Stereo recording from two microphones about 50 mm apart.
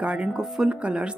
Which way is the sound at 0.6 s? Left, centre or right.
Right.